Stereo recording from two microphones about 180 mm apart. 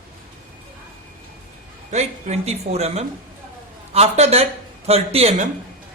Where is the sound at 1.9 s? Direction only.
40° right (ahead or behind).